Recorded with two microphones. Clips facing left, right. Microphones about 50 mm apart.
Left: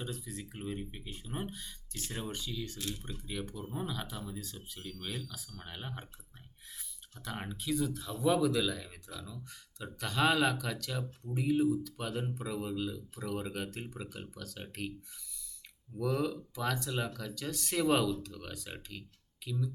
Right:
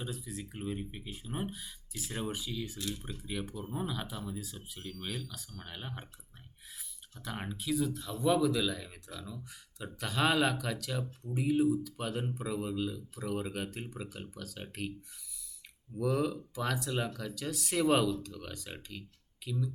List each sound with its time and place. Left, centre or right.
0.0 s speech: centre
7.3 s speech: centre
16.0 s speech: centre